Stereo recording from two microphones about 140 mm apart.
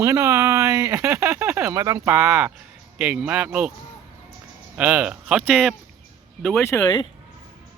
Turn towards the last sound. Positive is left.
turn(degrees=20)  # may be behind; listen again after turning